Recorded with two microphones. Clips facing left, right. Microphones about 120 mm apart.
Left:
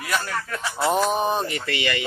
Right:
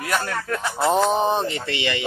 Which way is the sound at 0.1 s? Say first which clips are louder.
Right 2 dB; 55° right (ahead or behind).